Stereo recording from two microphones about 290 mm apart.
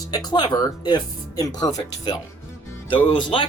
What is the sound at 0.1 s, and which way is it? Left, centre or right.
Speech, centre.